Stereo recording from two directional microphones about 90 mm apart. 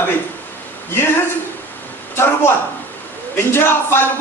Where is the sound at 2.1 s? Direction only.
25° left (ahead or behind).